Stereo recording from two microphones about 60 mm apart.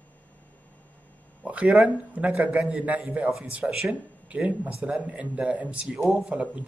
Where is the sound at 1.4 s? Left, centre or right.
Right.